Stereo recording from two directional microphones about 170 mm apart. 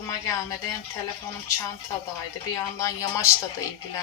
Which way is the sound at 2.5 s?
20° left (ahead or behind).